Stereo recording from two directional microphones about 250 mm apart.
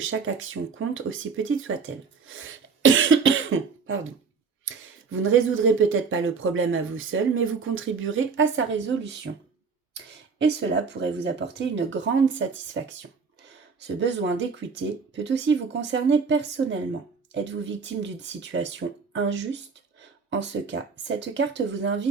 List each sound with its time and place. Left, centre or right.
0.0 s speech: right
2.2 s cough: right
5.1 s speech: right